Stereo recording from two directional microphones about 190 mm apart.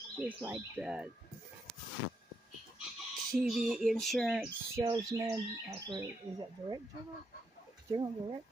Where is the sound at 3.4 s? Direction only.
Centre (ahead or behind).